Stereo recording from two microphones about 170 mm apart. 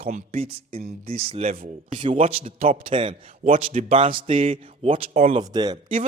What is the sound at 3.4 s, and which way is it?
Speech, 45° right (ahead or behind).